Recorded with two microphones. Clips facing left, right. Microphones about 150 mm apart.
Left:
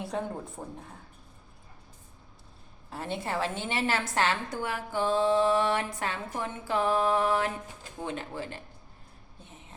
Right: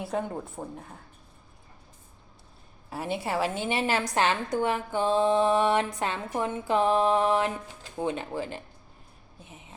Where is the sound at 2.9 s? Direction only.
10° right (ahead or behind).